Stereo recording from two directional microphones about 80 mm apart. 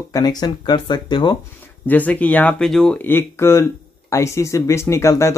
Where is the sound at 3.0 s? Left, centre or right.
Left.